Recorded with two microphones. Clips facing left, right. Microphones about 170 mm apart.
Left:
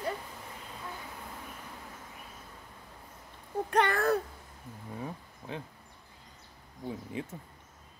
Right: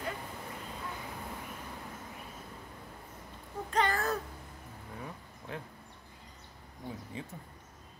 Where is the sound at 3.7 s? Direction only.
60° left (ahead or behind).